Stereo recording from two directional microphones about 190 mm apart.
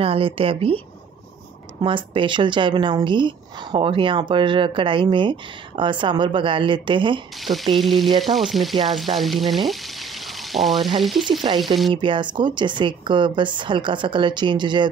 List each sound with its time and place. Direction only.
0.0 s speech: 30° right (ahead or behind)
1.8 s speech: 25° right (ahead or behind)
7.7 s frying: centre (ahead or behind)
11.9 s speech: 25° right (ahead or behind)